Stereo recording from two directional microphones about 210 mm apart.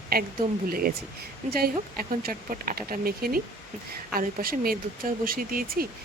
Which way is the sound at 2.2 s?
45° right (ahead or behind).